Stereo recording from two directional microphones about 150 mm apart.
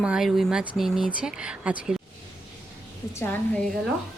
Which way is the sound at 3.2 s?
10° left (ahead or behind).